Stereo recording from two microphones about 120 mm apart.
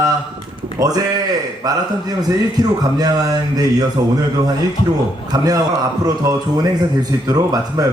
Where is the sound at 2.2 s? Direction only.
35° right (ahead or behind).